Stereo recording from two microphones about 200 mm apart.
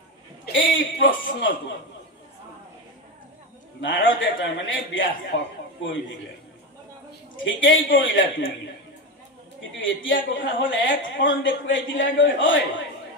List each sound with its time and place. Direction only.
0.5 s a man's voice: 70° left (ahead or behind)
3.8 s a woman's voice: 70° left (ahead or behind)
7.4 s a woman's voice: 70° left (ahead or behind)
9.6 s a woman's voice: 70° left (ahead or behind)